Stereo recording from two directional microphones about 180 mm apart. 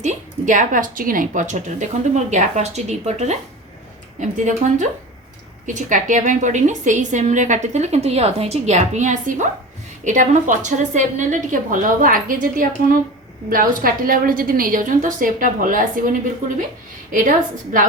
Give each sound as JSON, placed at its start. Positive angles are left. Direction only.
{"t": 0.0, "sound": "a woman's voice", "side_deg": -45}